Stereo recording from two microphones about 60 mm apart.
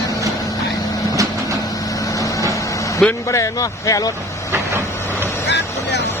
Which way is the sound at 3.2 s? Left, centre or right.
Left.